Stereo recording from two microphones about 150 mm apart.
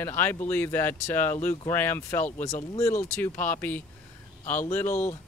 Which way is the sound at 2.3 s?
55° left (ahead or behind).